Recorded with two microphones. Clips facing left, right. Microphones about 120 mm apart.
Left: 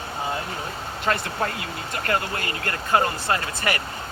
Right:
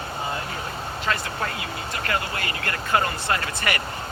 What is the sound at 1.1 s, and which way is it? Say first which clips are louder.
Speech: left 3 dB; 40° left (ahead or behind).